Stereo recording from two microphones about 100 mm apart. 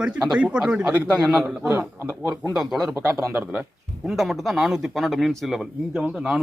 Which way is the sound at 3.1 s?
30° right (ahead or behind).